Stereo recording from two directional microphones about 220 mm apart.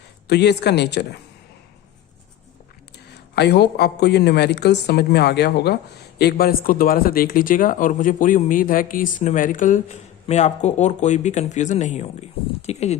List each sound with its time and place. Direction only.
0.3 s speech: 50° left (ahead or behind)
3.3 s speech: 50° left (ahead or behind); by 13.0 s 30° left (ahead or behind)